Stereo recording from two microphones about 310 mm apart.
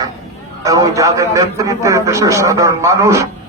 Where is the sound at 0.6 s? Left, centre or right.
Centre.